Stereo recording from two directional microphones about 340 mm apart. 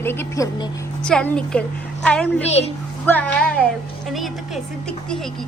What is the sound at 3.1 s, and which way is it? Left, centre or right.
A woman's voice, centre.